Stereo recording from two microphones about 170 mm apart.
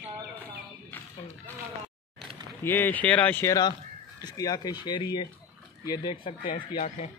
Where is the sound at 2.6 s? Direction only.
10° left (ahead or behind).